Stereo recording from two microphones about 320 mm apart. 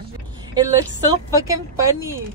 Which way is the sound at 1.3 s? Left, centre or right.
Centre.